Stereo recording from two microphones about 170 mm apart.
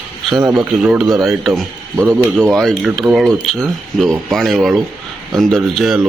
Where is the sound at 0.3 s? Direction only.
20° right (ahead or behind).